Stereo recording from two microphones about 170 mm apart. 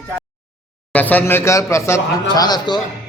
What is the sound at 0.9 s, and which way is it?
A man's voice, 10° left (ahead or behind).